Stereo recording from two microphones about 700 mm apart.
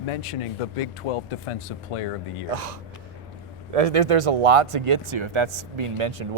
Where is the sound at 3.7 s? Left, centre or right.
Right.